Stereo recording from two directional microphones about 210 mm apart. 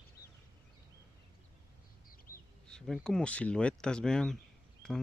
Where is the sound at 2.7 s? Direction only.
5° left (ahead or behind).